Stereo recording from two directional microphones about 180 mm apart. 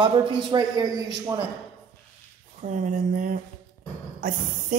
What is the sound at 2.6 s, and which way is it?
A woman's voice, 45° right (ahead or behind).